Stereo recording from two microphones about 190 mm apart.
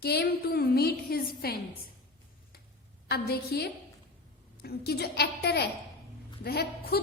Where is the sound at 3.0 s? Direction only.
55° left (ahead or behind).